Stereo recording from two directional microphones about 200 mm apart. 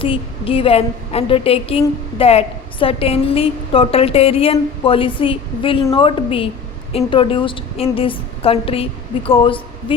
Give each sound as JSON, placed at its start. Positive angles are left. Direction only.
{"t": 0.0, "sound": "a woman's voice", "side_deg": 25}